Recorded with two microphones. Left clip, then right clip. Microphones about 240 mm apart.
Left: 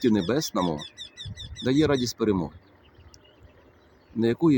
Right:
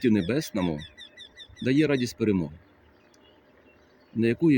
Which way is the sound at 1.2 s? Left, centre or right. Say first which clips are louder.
Left 5 dB; left.